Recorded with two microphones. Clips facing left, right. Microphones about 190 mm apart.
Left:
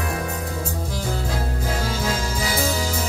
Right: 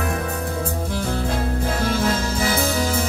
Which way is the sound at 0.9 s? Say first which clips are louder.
Right 3 dB; 60° right (ahead or behind).